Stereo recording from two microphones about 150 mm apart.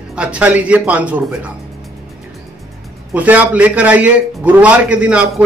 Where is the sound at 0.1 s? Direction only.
10° right (ahead or behind).